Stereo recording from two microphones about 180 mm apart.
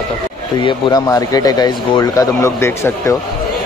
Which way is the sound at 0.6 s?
20° left (ahead or behind).